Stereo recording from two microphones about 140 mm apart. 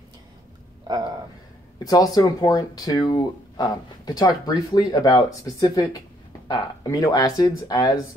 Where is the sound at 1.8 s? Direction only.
25° left (ahead or behind).